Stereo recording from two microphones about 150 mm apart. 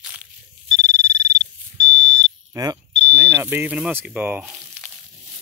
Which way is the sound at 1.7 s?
25° right (ahead or behind).